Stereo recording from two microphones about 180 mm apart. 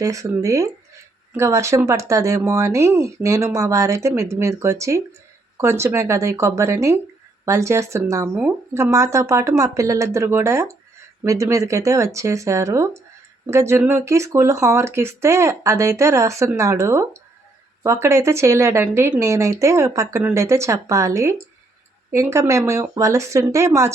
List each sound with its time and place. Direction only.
0.0 s speech: 15° right (ahead or behind)